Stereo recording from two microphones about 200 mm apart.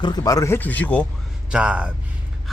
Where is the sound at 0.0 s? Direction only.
20° left (ahead or behind).